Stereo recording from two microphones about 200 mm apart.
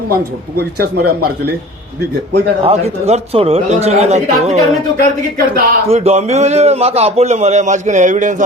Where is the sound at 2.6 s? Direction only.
30° right (ahead or behind).